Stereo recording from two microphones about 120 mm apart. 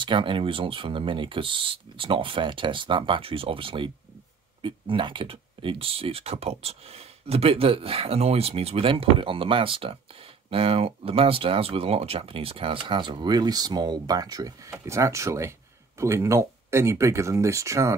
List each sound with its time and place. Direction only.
0.0 s speech: 45° right (ahead or behind); by 17.9 s 25° right (ahead or behind)